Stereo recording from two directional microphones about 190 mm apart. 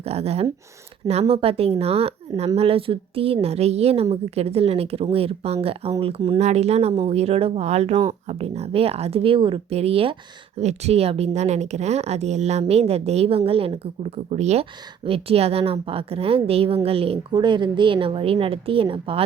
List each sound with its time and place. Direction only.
0.0 s speech: 35° right (ahead or behind)